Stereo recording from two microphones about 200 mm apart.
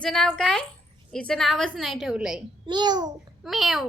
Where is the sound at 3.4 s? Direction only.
Centre (ahead or behind).